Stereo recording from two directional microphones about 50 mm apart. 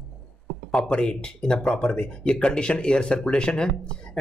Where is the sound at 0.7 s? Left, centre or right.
Centre.